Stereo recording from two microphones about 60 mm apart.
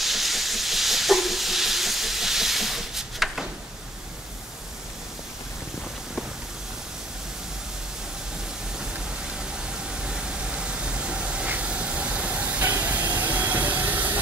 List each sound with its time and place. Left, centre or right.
0.0 s hiss: centre
9.4 s a sound: centre
12.8 s vehicle: right